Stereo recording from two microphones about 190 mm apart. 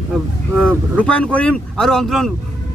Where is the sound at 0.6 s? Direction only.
5° left (ahead or behind).